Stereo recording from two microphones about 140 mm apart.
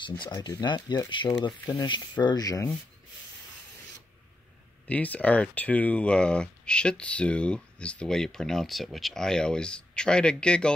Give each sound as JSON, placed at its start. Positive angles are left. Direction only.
{"t": 0.0, "sound": "speech", "side_deg": 30}
{"t": 4.8, "sound": "speech", "side_deg": 10}